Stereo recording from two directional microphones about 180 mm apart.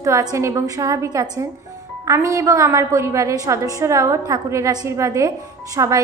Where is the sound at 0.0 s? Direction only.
20° right (ahead or behind).